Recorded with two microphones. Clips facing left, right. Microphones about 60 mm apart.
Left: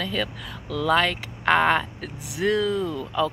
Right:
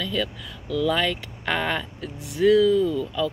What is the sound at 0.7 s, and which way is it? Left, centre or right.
Speech, left.